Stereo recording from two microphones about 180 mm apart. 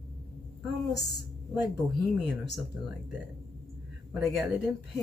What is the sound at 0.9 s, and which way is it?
Speech, 65° left (ahead or behind).